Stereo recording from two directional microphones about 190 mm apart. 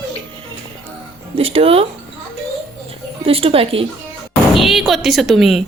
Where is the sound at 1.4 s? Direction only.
30° right (ahead or behind).